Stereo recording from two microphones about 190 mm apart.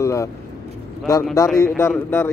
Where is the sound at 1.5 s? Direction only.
15° left (ahead or behind).